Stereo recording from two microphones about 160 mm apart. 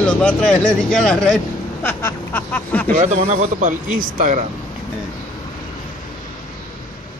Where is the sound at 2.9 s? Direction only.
45° right (ahead or behind).